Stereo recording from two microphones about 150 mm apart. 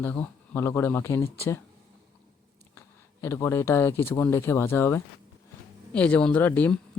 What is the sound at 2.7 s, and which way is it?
Speech, 15° left (ahead or behind).